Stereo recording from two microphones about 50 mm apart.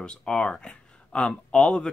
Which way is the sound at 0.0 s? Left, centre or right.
Centre.